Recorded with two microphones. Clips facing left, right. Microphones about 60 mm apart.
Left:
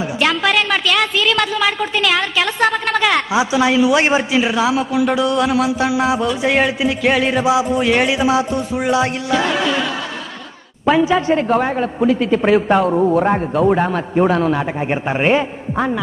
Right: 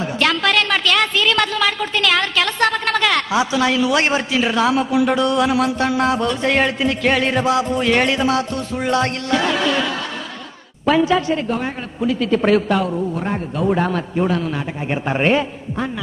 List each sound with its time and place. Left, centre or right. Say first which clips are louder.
0.0 s a woman's voice: left 1 dB; centre
10.9 s a woman's voice: left 1 dB; centre
11.1 s a woman's voice: left 5 dB; left
12.0 s speech: left 3 dB; left
12.3 s a woman's voice: right 2 dB; centre
12.6 s speech: left 5 dB; left
12.9 s speech: left 8 dB; left
13.7 s a woman's voice: left 1 dB; centre
14.1 s a woman's voice: left 9 dB; left
14.9 s a woman's voice: even; centre